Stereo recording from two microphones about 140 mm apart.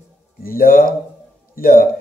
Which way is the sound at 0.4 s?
90° left.